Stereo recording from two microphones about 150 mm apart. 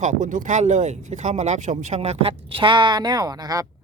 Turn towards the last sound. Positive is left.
turn(degrees=-25)  # may be behind; listen again after turning